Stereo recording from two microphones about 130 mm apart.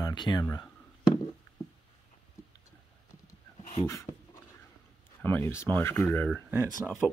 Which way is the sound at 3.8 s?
25° left (ahead or behind).